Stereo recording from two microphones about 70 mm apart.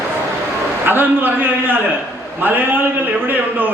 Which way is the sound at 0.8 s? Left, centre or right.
Right.